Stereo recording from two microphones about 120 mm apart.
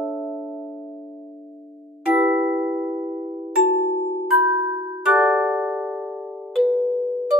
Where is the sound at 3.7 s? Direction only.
90° left.